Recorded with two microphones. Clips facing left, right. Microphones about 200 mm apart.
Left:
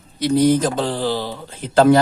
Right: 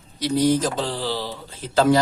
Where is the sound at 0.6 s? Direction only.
55° left (ahead or behind).